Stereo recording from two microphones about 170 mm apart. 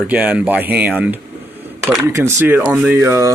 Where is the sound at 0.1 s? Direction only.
10° right (ahead or behind).